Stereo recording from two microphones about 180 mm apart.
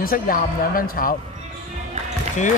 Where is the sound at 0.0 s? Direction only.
50° left (ahead or behind).